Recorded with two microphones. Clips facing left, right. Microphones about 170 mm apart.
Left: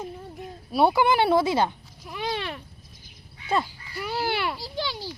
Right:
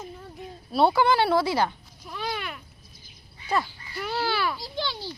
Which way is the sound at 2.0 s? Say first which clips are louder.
Left 2 dB; 15° left (ahead or behind).